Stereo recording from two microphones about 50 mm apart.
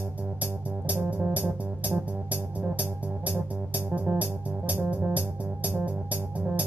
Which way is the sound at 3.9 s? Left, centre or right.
Right.